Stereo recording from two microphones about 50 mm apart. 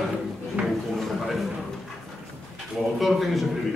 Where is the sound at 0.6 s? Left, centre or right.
Right.